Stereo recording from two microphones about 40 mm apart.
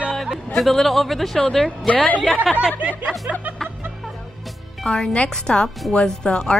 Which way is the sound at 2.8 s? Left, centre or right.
Right.